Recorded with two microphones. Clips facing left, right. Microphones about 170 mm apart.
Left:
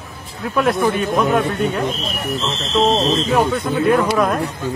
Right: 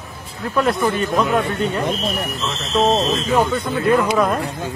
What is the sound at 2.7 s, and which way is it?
Speech, 15° right (ahead or behind).